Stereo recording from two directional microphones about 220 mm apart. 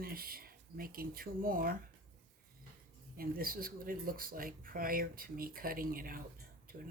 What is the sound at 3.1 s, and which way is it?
Speech, 40° right (ahead or behind).